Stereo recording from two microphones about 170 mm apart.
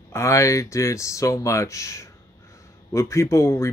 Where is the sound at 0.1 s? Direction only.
15° left (ahead or behind).